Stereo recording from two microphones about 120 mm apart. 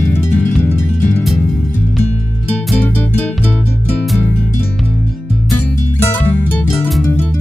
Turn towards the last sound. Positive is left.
turn(degrees=15)  # may be behind; listen again after turning